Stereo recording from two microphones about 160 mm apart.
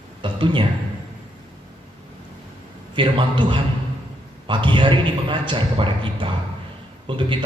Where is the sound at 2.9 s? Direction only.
30° right (ahead or behind).